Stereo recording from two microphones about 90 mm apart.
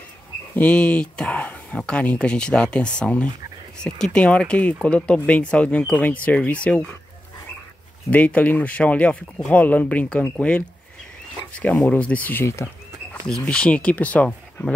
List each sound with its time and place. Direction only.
0.6 s speech: 15° left (ahead or behind)
8.1 s speech: 15° left (ahead or behind)
13.3 s speech: 10° left (ahead or behind)